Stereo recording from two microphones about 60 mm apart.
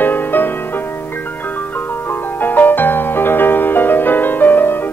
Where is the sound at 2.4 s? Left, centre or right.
Left.